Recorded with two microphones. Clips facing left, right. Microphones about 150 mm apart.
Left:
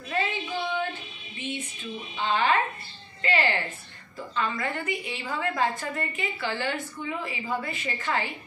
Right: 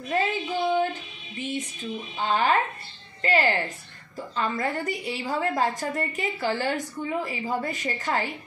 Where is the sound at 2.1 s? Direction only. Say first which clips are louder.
Right 1 dB; 40° right (ahead or behind).